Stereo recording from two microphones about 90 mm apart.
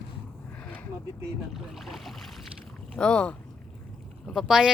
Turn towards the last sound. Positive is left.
turn(degrees=-5)  # may be behind; listen again after turning